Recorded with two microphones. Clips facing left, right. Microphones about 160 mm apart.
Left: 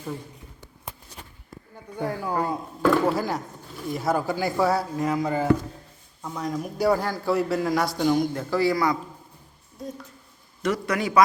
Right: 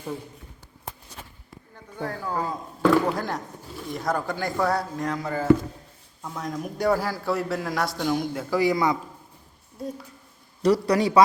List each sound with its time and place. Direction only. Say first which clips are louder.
1.7 s a man's voice: left 3 dB; 15° left (ahead or behind)
6.2 s a man's voice: left 2 dB; centre (ahead or behind); by 9.0 s 20° right (ahead or behind)
10.6 s a man's voice: right 5 dB; 35° right (ahead or behind)